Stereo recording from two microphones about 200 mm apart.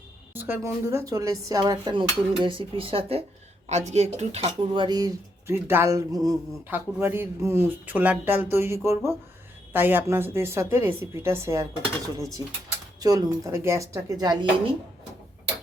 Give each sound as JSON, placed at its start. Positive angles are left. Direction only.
{"t": 0.3, "sound": "speech", "side_deg": -10}
{"t": 13.0, "sound": "speech", "side_deg": -15}